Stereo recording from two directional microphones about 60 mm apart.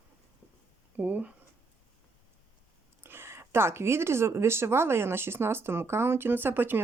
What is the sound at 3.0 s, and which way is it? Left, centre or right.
Speech, right.